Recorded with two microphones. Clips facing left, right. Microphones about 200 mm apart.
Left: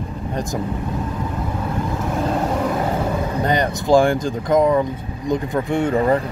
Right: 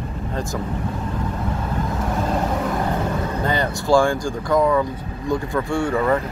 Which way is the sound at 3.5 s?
20° left (ahead or behind).